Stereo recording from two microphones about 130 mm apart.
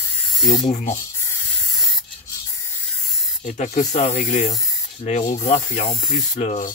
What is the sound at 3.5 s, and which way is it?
Speech, 65° left (ahead or behind).